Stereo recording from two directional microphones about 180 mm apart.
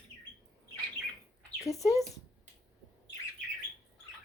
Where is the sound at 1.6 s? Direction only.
20° left (ahead or behind).